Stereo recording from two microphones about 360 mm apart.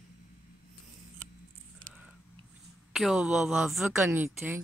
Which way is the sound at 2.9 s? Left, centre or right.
Centre.